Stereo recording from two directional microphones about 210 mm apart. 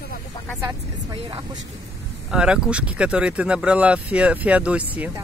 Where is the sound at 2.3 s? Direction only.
5° right (ahead or behind).